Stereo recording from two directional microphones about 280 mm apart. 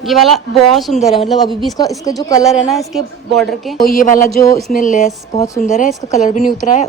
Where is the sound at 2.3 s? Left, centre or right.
Centre.